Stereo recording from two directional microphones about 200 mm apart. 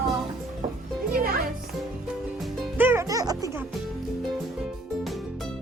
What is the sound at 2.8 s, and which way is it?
Music, 10° right (ahead or behind).